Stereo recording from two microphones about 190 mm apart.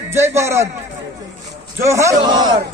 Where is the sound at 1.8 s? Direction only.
15° right (ahead or behind).